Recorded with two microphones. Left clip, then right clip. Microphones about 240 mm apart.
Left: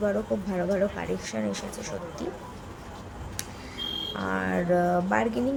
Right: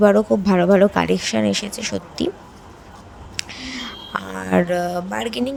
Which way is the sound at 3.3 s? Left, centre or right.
Right.